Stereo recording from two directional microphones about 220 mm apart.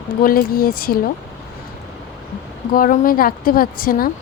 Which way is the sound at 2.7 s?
40° left (ahead or behind).